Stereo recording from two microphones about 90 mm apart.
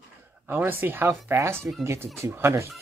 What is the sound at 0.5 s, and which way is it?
Speech, 20° right (ahead or behind).